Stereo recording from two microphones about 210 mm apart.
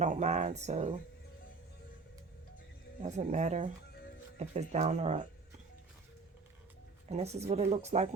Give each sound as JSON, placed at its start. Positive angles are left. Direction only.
{"t": 0.0, "sound": "speech", "side_deg": -35}
{"t": 3.0, "sound": "speech", "side_deg": -35}
{"t": 7.1, "sound": "speech", "side_deg": -30}